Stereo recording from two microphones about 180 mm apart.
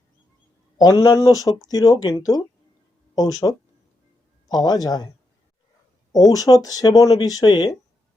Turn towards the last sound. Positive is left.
turn(degrees=25)  # may be behind; listen again after turning